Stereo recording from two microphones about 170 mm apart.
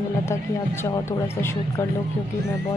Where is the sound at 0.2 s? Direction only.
15° left (ahead or behind).